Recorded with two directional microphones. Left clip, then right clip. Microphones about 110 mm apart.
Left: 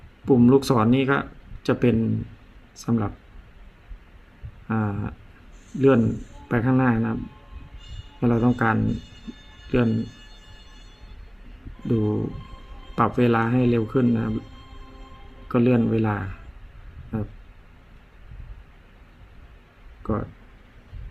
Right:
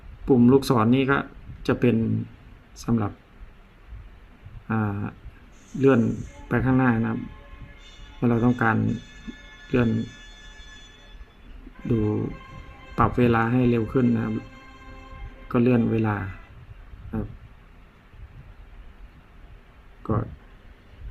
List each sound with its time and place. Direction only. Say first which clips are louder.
0.3 s speech: left 1 dB; 10° left (ahead or behind)
4.7 s speech: even; 5° left (ahead or behind)
8.2 s speech: even; 10° left (ahead or behind)
8.8 s speech: left 1 dB; 30° left (ahead or behind)
9.6 s speech: left 1 dB; centre (ahead or behind)
13.0 s speech: even; 10° left (ahead or behind)
14.1 s speech: left 1 dB; 25° left (ahead or behind)
15.4 s speech: left 1 dB; 10° left (ahead or behind)
20.0 s speech: even; 5° left (ahead or behind)